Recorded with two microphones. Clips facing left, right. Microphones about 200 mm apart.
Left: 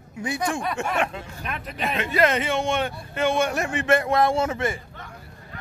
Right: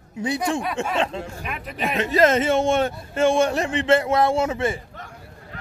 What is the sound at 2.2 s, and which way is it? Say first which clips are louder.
Speech: right 4 dB; 45° right (ahead or behind).